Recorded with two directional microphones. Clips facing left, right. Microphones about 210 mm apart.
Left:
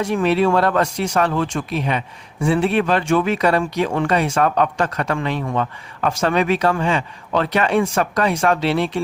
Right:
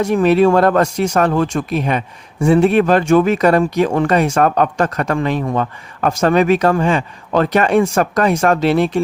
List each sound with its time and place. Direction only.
0.0 s speech: 45° right (ahead or behind)